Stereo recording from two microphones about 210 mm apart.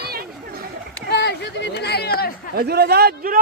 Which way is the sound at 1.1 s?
55° left (ahead or behind).